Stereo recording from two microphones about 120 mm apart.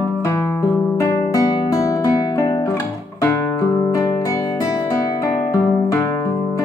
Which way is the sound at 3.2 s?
25° left (ahead or behind).